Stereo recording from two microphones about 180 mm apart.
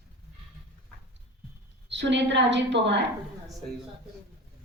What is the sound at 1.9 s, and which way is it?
A woman's voice, 75° right (ahead or behind).